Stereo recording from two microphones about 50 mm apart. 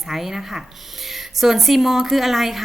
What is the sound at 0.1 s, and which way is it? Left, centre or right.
Speech, centre.